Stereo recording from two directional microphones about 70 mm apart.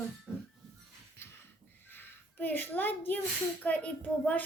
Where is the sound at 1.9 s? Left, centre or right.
Left.